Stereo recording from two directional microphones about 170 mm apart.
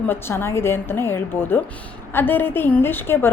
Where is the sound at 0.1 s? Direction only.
15° left (ahead or behind).